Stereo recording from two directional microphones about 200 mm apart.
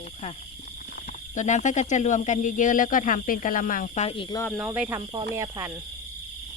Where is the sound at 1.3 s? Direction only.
35° left (ahead or behind).